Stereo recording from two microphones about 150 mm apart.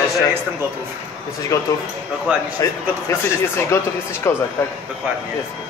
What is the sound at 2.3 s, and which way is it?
Speech, 10° right (ahead or behind).